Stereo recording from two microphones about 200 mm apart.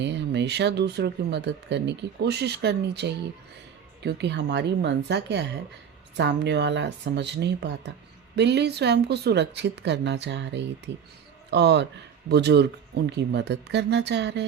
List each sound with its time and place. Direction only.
0.0 s speech: 60° right (ahead or behind)